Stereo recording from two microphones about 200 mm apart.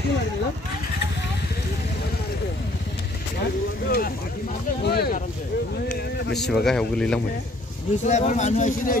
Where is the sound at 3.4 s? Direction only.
50° left (ahead or behind).